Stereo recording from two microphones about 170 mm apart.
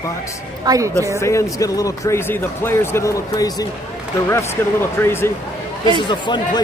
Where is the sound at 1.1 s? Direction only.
15° left (ahead or behind).